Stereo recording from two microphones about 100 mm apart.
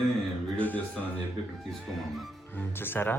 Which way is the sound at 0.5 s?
15° left (ahead or behind).